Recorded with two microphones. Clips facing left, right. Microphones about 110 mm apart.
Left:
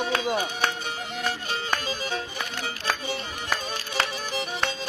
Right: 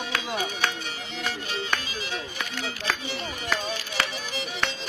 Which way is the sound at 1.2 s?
40° left (ahead or behind).